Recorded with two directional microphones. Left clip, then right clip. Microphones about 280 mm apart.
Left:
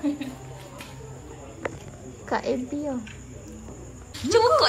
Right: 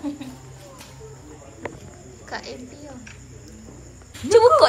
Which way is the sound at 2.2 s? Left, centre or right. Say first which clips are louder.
Left 7 dB; centre.